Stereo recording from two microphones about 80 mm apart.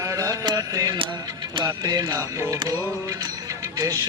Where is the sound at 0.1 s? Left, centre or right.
Right.